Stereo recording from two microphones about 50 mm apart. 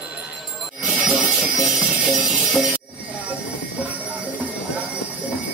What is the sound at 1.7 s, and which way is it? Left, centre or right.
Music, centre.